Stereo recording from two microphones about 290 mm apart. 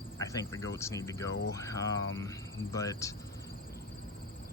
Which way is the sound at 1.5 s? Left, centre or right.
Centre.